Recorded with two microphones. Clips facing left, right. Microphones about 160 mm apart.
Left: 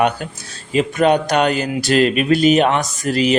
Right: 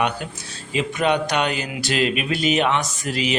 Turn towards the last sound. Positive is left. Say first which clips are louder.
# left 7 dB
turn(degrees=45)  # may be behind; listen again after turning